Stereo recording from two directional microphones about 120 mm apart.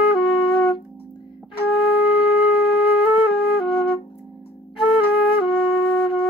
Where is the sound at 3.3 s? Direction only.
50° left (ahead or behind).